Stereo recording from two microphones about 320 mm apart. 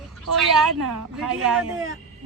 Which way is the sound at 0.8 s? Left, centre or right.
Right.